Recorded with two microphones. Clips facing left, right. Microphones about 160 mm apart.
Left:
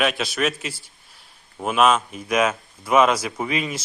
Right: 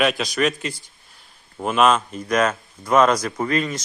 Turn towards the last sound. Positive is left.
turn(degrees=5)  # may be behind; listen again after turning